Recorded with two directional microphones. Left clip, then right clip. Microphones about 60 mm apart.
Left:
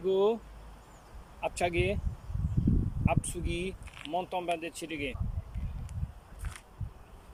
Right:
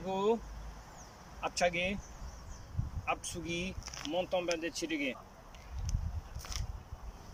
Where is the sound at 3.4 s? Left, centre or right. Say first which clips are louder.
Left 2 dB; left.